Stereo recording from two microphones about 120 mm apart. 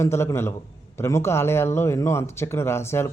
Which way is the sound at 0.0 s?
20° left (ahead or behind).